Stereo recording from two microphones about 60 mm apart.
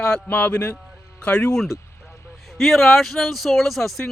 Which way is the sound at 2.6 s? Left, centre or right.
Centre.